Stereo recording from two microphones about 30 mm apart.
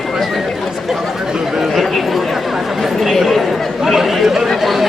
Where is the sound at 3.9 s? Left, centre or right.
Centre.